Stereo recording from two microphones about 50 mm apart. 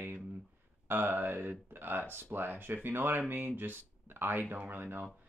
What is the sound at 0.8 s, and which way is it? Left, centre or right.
Speech, right.